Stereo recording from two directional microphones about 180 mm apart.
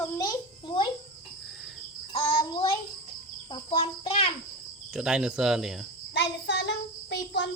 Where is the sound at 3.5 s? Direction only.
30° left (ahead or behind).